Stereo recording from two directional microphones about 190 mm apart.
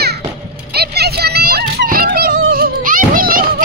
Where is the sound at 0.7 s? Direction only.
60° right (ahead or behind).